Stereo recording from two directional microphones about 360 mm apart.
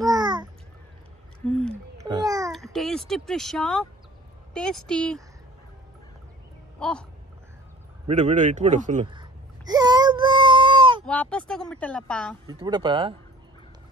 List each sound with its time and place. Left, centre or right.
0.0 s babbling: centre
1.7 s babbling: centre
4.6 s speech: centre
6.8 s a sound: centre
8.1 s babbling: centre
11.1 s speech: centre
12.4 s speech: centre